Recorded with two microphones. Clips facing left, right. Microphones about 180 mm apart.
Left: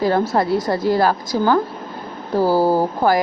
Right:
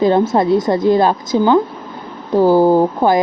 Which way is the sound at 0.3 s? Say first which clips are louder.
Right 5 dB; 20° right (ahead or behind).